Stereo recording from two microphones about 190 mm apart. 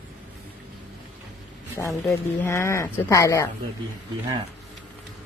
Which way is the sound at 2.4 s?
15° left (ahead or behind).